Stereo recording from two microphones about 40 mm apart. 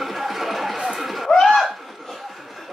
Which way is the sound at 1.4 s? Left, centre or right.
Centre.